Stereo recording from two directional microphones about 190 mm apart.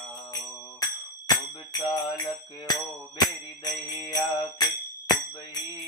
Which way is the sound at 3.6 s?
20° left (ahead or behind).